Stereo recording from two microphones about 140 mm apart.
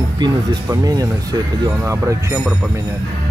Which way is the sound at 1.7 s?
15° right (ahead or behind).